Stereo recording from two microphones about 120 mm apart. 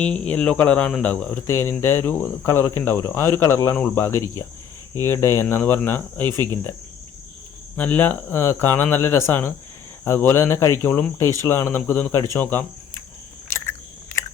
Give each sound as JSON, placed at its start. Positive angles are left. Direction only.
{"t": 0.0, "sound": "speech", "side_deg": 10}
{"t": 7.8, "sound": "speech", "side_deg": 15}
{"t": 13.5, "sound": "chewing", "side_deg": 20}